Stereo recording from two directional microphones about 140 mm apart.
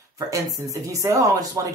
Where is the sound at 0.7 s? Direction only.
25° right (ahead or behind).